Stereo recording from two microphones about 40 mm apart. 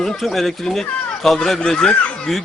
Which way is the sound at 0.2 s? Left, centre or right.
Centre.